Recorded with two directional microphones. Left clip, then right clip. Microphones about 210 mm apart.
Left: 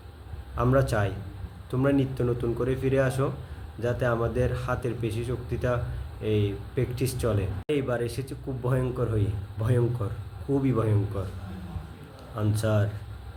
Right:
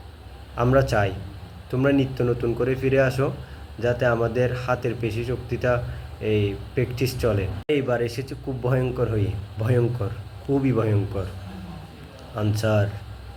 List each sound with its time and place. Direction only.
0.5 s speech: 15° left (ahead or behind)
12.4 s speech: 15° left (ahead or behind)